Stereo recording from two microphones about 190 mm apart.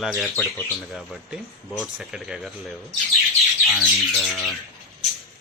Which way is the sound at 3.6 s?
5° left (ahead or behind).